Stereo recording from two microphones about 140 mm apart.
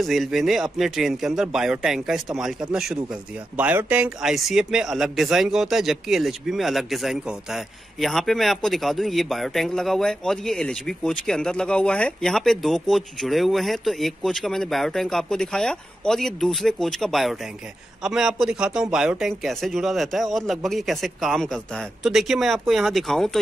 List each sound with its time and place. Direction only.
0.0 s speech: centre (ahead or behind)